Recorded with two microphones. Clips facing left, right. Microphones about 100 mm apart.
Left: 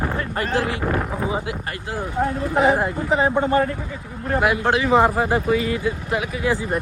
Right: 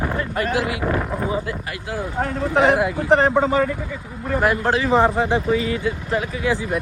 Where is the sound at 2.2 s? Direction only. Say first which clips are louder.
Right 1 dB; 85° right.